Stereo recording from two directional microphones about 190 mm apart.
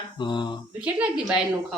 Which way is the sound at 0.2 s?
25° left (ahead or behind).